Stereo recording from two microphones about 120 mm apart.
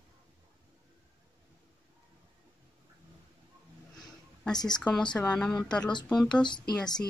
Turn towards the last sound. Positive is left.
turn(degrees=5)  # may be behind; listen again after turning